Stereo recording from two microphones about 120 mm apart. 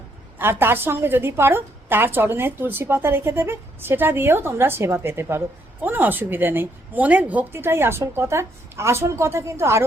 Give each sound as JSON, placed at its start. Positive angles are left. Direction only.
{"t": 0.3, "sound": "a woman's voice", "side_deg": -20}